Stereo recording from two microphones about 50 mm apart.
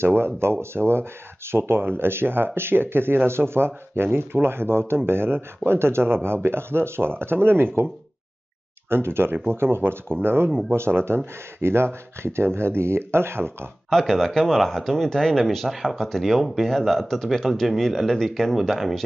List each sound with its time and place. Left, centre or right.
0.0 s speech: right
13.8 s speech: centre